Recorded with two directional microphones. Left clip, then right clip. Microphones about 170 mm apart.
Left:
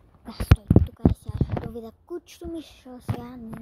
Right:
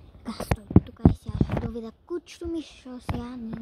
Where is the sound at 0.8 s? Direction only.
15° right (ahead or behind).